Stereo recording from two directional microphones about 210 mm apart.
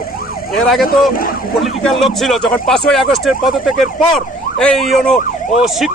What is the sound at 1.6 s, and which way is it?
Speech, centre (ahead or behind).